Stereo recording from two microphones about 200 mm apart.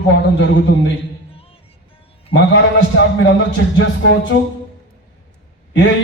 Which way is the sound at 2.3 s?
65° left (ahead or behind).